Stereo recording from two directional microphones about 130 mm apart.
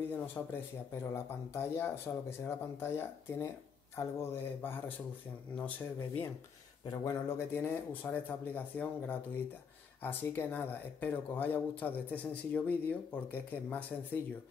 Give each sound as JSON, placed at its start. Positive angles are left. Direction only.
{"t": 0.1, "sound": "speech", "side_deg": 20}
{"t": 6.9, "sound": "speech", "side_deg": 30}
{"t": 7.2, "sound": "speech", "side_deg": 15}